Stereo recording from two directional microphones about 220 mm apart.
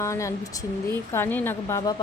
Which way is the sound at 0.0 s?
15° left (ahead or behind).